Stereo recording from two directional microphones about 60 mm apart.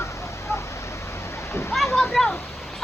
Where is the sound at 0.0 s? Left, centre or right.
Left.